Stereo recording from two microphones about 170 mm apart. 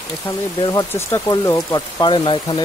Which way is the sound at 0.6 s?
20° left (ahead or behind).